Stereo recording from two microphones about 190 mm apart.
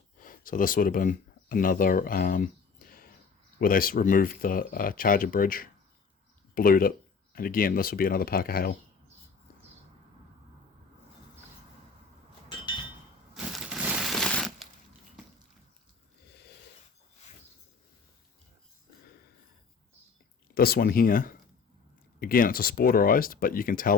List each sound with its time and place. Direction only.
0.2 s speech: 45° left (ahead or behind)
13.8 s a sound: 5° right (ahead or behind)
20.6 s speech: 55° left (ahead or behind)